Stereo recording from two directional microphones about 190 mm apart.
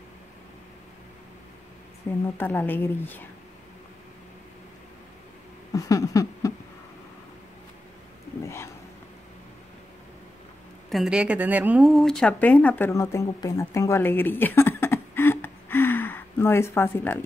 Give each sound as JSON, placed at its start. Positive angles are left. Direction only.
{"t": 2.2, "sound": "speech", "side_deg": 10}
{"t": 5.7, "sound": "a sound", "side_deg": 15}
{"t": 10.9, "sound": "speech", "side_deg": 0}